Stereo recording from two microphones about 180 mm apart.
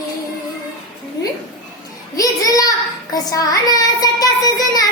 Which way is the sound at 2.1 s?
20° left (ahead or behind).